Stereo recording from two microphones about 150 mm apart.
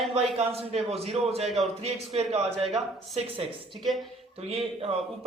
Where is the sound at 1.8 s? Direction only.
45° right (ahead or behind).